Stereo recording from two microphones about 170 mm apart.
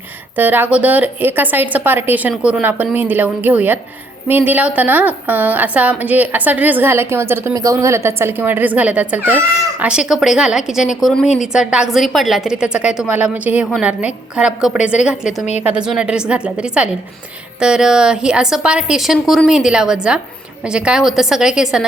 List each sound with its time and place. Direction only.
0.3 s a woman's voice: 10° right (ahead or behind)